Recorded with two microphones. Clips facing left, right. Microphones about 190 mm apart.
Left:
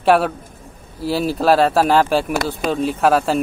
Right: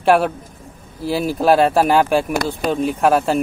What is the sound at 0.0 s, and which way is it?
Speech, centre (ahead or behind).